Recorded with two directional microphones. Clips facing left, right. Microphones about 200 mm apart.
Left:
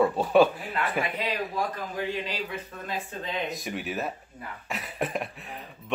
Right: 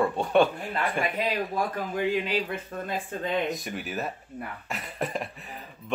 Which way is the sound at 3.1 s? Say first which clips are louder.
Right 5 dB; 55° right (ahead or behind).